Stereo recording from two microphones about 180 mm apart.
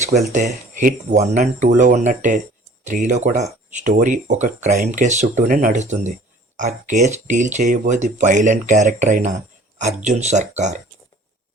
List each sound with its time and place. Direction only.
0.3 s speech: 45° right (ahead or behind)